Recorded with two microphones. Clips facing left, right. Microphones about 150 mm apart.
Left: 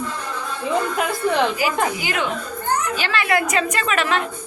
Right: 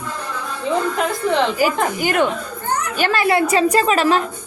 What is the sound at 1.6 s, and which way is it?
A woman's voice, 45° right (ahead or behind).